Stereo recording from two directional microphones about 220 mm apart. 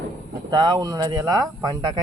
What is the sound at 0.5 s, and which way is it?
Speech, 20° right (ahead or behind).